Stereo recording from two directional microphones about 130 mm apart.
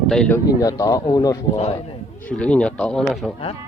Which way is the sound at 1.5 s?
50° left (ahead or behind).